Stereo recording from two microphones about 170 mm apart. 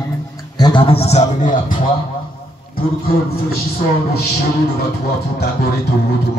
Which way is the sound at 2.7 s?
60° left (ahead or behind).